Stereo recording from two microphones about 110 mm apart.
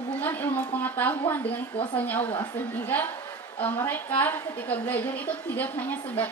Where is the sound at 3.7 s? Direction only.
20° left (ahead or behind).